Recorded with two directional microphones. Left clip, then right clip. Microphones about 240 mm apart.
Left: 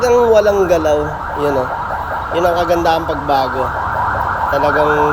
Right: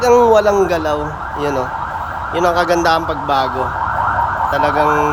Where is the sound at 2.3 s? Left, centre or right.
Centre.